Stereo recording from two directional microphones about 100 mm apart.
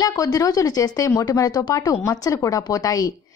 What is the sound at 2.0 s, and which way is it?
A woman's voice, 35° left (ahead or behind).